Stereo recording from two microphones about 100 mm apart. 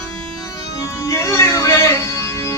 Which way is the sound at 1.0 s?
30° left (ahead or behind).